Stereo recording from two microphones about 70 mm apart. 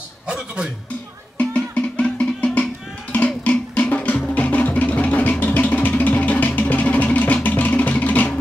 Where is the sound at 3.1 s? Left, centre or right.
Left.